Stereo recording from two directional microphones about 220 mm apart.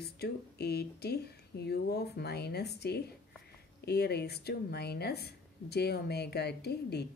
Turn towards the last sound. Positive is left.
turn(degrees=50)  # may be behind; listen again after turning